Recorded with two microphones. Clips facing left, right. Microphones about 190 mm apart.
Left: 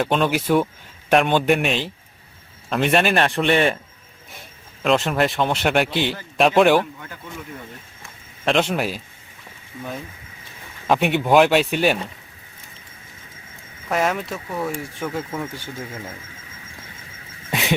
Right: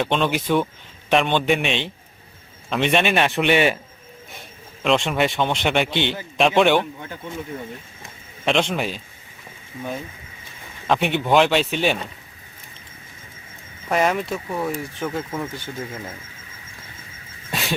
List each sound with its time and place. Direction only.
0.0 s speech: 5° left (ahead or behind)
4.8 s speech: centre (ahead or behind)
7.0 s speech: 25° right (ahead or behind)
8.4 s speech: 5° left (ahead or behind)
10.8 s speech: 5° left (ahead or behind)
13.9 s speech: centre (ahead or behind)
17.5 s a sound: 20° left (ahead or behind)